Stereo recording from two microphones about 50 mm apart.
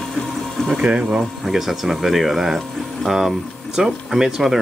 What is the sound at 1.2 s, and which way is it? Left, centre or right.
Speech, centre.